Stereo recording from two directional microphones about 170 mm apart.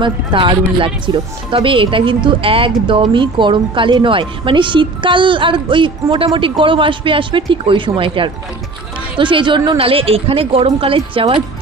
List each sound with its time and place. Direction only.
0.0 s speech: 30° right (ahead or behind)